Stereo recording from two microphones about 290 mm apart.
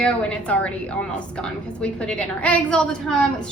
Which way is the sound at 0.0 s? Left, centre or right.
Centre.